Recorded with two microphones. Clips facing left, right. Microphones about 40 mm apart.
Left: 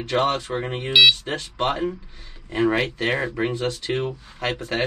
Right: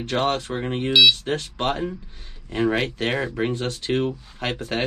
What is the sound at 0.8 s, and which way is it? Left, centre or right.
Speech, left.